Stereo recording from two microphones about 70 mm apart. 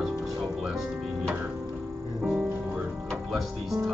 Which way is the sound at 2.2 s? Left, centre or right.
Centre.